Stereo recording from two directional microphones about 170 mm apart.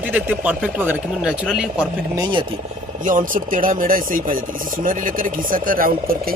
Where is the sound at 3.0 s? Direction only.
50° right (ahead or behind).